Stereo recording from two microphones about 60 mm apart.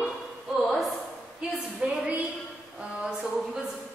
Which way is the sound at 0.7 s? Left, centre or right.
Centre.